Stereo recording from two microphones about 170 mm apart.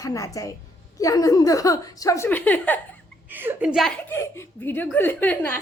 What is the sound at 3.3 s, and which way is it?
Speech, 10° right (ahead or behind).